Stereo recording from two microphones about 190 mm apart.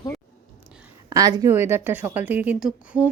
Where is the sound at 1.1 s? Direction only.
20° right (ahead or behind).